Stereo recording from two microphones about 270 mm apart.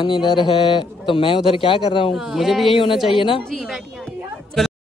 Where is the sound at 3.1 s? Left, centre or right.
Centre.